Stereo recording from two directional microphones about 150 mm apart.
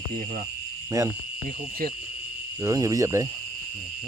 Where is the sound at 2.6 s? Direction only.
20° right (ahead or behind).